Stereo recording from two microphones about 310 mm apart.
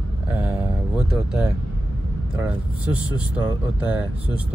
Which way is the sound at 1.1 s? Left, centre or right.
Centre.